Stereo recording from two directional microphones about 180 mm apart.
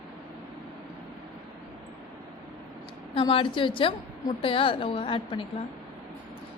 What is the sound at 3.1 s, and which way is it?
A woman's voice, 30° left (ahead or behind).